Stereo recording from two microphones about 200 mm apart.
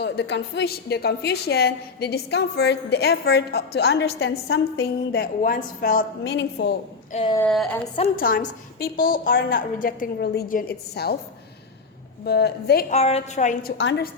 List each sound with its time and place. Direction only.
0.0 s a woman's voice: 60° left (ahead or behind); by 4.9 s 85° left
5.1 s a woman's voice: 45° left (ahead or behind)
6.2 s a woman's voice: 60° left (ahead or behind)
7.1 s speech: 30° left (ahead or behind)
7.3 s speech: 5° left (ahead or behind)
8.1 s a woman's voice: 45° left (ahead or behind)
12.2 s a woman's voice: 55° left (ahead or behind)
12.9 s a woman's voice: 30° left (ahead or behind)